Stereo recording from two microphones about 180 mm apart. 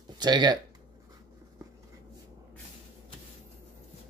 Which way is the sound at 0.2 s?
25° right (ahead or behind).